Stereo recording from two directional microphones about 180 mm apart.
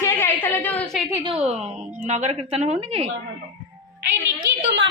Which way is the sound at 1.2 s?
35° right (ahead or behind).